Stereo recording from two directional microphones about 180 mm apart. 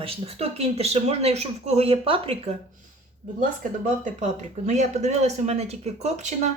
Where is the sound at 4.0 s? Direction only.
40° right (ahead or behind).